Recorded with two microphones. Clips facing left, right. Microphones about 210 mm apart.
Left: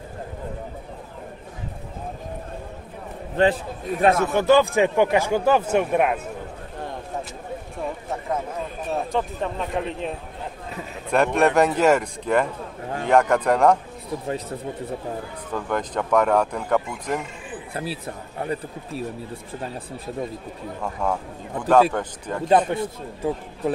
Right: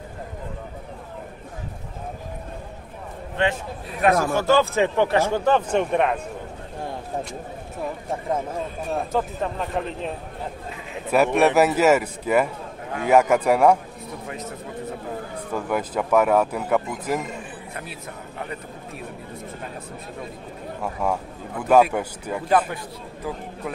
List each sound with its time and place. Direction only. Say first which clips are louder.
3.4 s speech: left 4 dB; 35° left (ahead or behind)
4.0 s a man's voice: left 1 dB; 25° left (ahead or behind); by 6.2 s 5° left (ahead or behind)
8.9 s speech: even; centre (ahead or behind)
15.5 s speech: right 1 dB; 5° right (ahead or behind)
17.7 s speech: left 9 dB; 35° left (ahead or behind)
20.8 s speech: right 1 dB; 10° right (ahead or behind)
22.5 s a man's voice: left 3 dB; 25° left (ahead or behind)